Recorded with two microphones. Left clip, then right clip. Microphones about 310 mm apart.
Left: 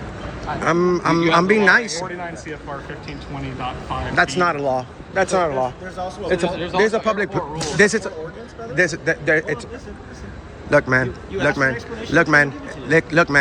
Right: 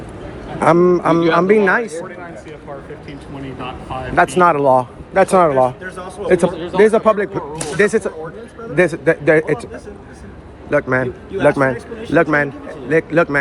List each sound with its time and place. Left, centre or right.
0.6 s a man's voice: centre
3.6 s speech: centre
6.2 s a man's voice: right
6.7 s a man's voice: centre
10.7 s a man's voice: centre